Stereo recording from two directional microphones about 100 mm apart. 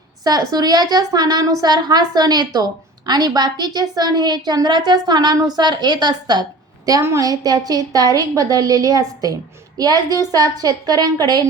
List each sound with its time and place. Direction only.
0.3 s a woman's voice: 40° right (ahead or behind)
7.0 s a woman's voice: 30° right (ahead or behind)